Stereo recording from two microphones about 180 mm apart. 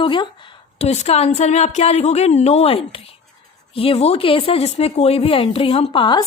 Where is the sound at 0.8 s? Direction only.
40° left (ahead or behind).